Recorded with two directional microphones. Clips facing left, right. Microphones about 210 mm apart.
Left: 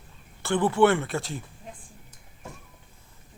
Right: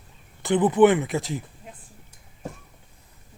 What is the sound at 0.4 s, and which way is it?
Speech, 20° right (ahead or behind).